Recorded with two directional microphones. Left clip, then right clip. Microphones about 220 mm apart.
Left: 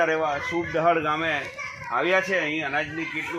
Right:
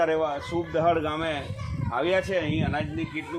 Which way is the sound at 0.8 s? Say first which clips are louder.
Left 2 dB; 15° right (ahead or behind).